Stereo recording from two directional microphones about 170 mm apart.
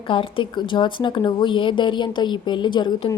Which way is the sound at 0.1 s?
30° left (ahead or behind).